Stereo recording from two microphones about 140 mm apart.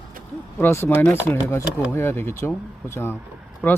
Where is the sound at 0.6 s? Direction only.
15° left (ahead or behind).